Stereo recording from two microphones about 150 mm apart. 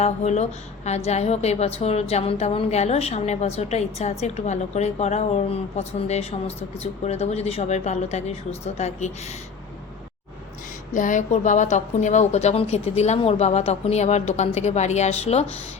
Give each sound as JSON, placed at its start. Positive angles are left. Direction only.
{"t": 0.0, "sound": "a woman's voice", "side_deg": 50}
{"t": 10.9, "sound": "a woman's voice", "side_deg": 60}